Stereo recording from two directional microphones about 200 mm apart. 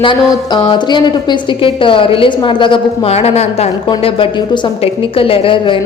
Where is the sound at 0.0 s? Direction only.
25° left (ahead or behind).